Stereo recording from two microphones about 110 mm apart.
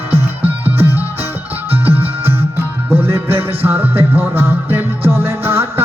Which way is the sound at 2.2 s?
20° right (ahead or behind).